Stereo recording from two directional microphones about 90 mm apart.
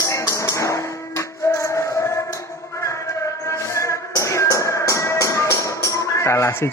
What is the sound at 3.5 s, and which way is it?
Music, 35° left (ahead or behind).